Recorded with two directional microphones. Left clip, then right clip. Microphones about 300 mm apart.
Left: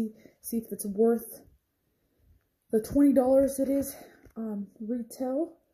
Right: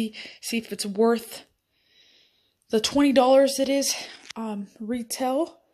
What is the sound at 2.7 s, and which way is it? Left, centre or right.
Speech, centre.